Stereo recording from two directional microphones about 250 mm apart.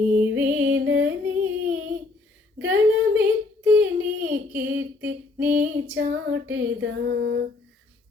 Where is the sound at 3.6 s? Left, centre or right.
Centre.